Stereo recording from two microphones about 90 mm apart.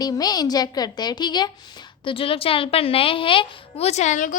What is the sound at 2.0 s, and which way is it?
A woman's voice, 85° left.